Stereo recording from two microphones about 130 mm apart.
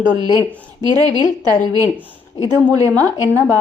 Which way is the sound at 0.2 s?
35° right (ahead or behind).